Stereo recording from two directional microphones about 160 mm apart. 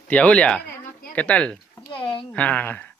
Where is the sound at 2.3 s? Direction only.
10° left (ahead or behind).